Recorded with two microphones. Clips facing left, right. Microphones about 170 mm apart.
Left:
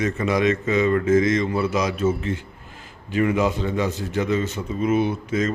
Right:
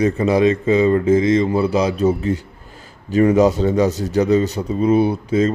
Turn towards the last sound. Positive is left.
turn(degrees=-30)  # may be behind; listen again after turning